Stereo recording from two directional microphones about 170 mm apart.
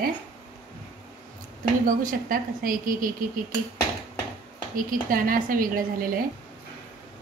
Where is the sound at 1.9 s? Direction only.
55° right (ahead or behind).